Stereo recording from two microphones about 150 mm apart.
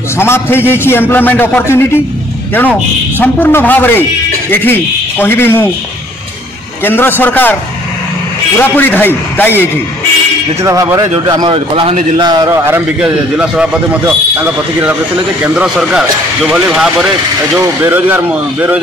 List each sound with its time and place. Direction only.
0.2 s a man's voice: 15° left (ahead or behind)
3.2 s a man's voice: 15° left (ahead or behind)
5.2 s a man's voice: 15° left (ahead or behind)
6.8 s a man's voice: 15° left (ahead or behind)
8.5 s a man's voice: 10° left (ahead or behind)
10.6 s a man's voice: 20° right (ahead or behind); by 16.9 s 5° right (ahead or behind)
17.6 s a man's voice: 15° right (ahead or behind)